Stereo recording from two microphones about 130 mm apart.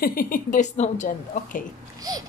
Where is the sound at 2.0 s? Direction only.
30° right (ahead or behind).